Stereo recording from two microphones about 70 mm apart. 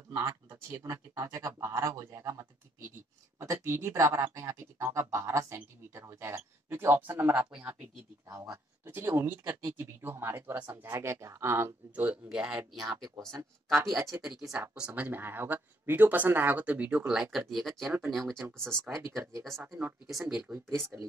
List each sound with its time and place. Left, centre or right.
0.1 s speech: right
8.3 s speech: right
9.0 s speech: right
11.9 s speech: right
13.7 s speech: centre
15.0 s speech: right; by 18.9 s centre
18.9 s speech: right
20.1 s speech: centre